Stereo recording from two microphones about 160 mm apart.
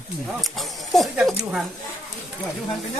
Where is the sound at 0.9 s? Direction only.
Centre (ahead or behind).